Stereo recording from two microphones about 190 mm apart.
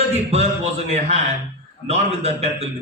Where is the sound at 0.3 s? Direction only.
35° right (ahead or behind).